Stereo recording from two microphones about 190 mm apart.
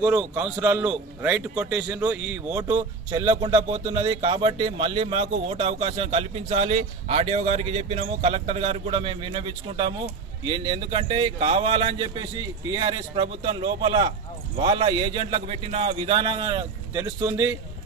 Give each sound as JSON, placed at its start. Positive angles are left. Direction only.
{"t": 0.0, "sound": "a man's voice", "side_deg": -10}